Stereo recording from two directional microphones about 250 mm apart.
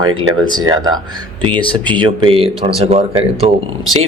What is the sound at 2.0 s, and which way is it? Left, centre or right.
Speech, right.